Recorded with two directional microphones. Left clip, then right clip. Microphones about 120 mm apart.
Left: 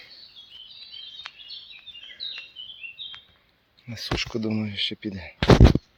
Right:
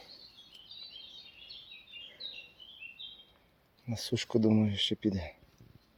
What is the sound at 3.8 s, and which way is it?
Speech, 20° right (ahead or behind).